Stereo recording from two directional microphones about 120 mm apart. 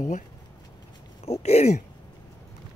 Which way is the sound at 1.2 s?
60° left (ahead or behind).